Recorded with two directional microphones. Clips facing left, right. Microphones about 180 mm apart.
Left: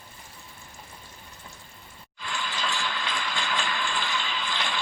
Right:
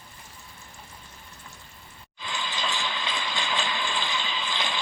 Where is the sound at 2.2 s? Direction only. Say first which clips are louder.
Even; 20° right (ahead or behind).